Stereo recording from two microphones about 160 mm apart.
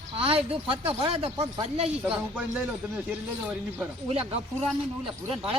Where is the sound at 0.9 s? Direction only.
35° right (ahead or behind).